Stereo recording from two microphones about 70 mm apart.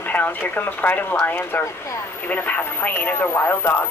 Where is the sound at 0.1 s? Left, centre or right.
Left.